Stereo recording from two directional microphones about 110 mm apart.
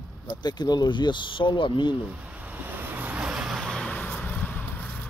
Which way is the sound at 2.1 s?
15° right (ahead or behind).